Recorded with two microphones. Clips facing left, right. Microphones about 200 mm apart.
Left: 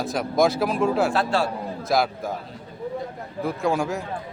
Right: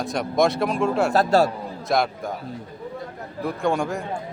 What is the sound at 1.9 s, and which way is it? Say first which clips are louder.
Speech: even; centre (ahead or behind).